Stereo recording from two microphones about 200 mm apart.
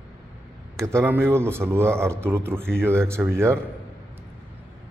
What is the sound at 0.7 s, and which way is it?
A man's voice, 15° right (ahead or behind).